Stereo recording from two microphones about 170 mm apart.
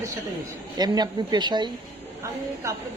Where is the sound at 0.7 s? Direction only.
25° right (ahead or behind).